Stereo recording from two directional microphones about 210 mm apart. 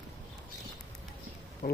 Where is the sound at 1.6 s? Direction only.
50° left (ahead or behind).